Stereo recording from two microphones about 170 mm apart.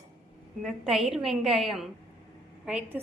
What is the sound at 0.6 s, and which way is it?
A woman's voice, centre (ahead or behind).